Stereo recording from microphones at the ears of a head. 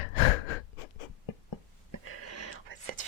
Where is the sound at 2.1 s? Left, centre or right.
Right.